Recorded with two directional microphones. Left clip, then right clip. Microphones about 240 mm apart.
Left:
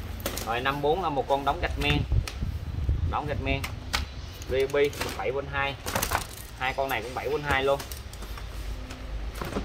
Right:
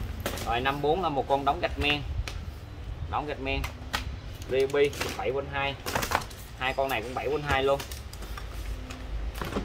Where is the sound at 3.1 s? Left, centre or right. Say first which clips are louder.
Left 1 dB; right.